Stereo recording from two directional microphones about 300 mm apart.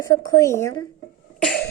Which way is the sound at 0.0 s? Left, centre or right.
Centre.